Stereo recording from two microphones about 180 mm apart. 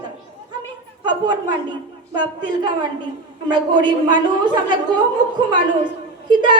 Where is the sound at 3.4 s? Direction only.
25° right (ahead or behind).